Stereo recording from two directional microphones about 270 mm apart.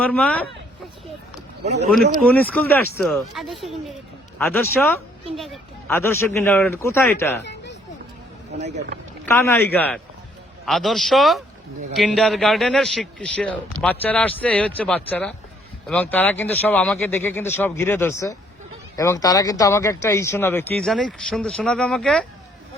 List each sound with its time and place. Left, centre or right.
0.0 s speech: centre
1.6 s speech: right
2.2 s speech: centre
9.2 s speech: centre